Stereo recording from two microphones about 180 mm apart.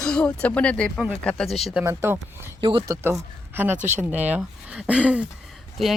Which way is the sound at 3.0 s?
10° right (ahead or behind).